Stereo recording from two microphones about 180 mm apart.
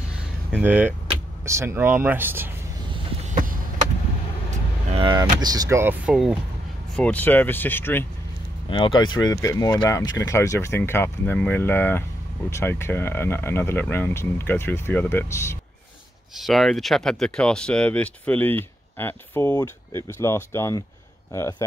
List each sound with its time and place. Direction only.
0.5 s speech: 10° right (ahead or behind)
3.3 s a sound: 45° right (ahead or behind)
4.9 s speech: 25° right (ahead or behind)
7.0 s speech: 10° left (ahead or behind)
8.6 s speech: 25° left (ahead or behind)
16.3 s speech: centre (ahead or behind); by 21.6 s 15° left (ahead or behind)